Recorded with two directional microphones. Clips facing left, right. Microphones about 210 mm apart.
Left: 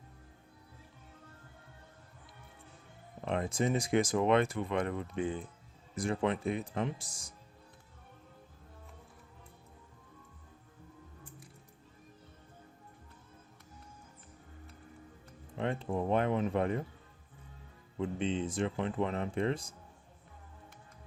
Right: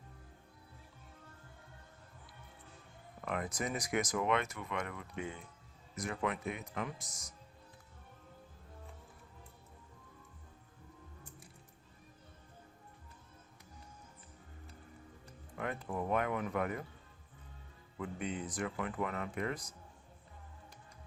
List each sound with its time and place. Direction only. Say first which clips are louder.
3.2 s speech: left 6 dB; 25° left (ahead or behind)
15.5 s speech: left 5 dB; 25° left (ahead or behind)
17.9 s speech: left 6 dB; 25° left (ahead or behind)